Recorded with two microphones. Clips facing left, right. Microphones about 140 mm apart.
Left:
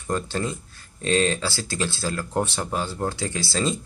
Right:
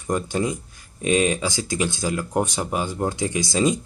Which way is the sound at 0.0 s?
15° right (ahead or behind).